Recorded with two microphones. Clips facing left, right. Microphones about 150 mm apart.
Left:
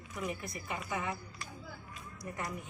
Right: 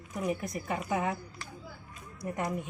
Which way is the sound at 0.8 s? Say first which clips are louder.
Right 6 dB; 55° right (ahead or behind).